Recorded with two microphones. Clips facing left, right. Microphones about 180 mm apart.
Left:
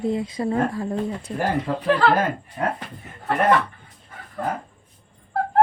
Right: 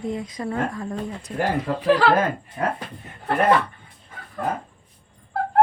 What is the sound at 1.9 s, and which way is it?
Speech, 5° right (ahead or behind).